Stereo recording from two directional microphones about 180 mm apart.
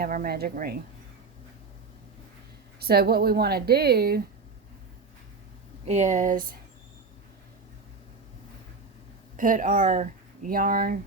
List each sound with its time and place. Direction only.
0.0 s a woman's voice: 55° right (ahead or behind)
2.8 s a woman's voice: 60° right (ahead or behind)
5.8 s speech: 40° right (ahead or behind)
9.4 s speech: 45° right (ahead or behind)